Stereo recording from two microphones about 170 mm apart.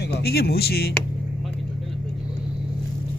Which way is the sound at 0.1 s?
70° left (ahead or behind).